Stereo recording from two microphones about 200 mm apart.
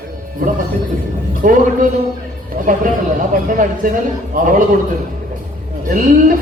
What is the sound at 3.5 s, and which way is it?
A man's voice, 40° right (ahead or behind).